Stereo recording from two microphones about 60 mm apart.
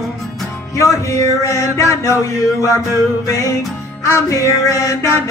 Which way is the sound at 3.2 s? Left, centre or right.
Left.